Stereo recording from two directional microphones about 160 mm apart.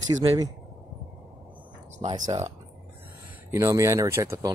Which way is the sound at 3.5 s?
20° right (ahead or behind).